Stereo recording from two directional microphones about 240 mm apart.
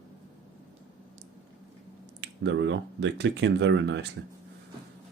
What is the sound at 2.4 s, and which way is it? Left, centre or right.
Speech, right.